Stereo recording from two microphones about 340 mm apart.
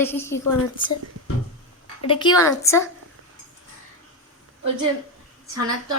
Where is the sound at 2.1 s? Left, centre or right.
Centre.